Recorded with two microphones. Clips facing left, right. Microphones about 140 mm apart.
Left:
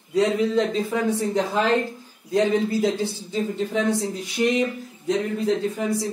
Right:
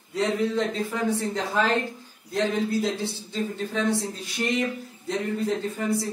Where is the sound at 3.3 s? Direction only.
20° left (ahead or behind).